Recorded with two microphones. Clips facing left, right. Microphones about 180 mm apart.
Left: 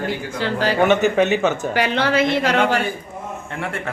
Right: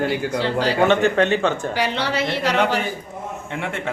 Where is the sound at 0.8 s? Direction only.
5° left (ahead or behind).